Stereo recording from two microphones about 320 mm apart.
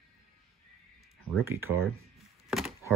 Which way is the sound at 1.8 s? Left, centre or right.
Centre.